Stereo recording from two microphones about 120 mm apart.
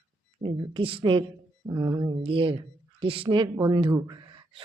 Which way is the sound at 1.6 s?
30° right (ahead or behind).